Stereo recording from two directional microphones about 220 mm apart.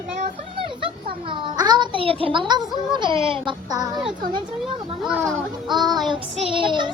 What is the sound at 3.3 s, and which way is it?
Speech, 20° right (ahead or behind).